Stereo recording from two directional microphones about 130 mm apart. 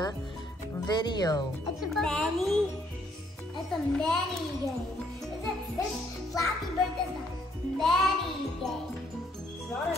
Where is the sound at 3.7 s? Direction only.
5° left (ahead or behind).